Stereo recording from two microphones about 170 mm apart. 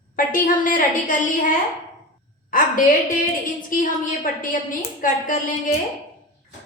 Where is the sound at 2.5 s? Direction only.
55° left (ahead or behind).